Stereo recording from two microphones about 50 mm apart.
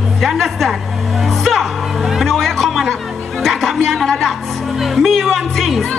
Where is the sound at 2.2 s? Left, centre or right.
Centre.